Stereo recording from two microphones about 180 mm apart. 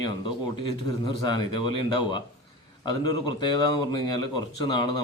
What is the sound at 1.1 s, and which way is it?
Speech, 25° left (ahead or behind).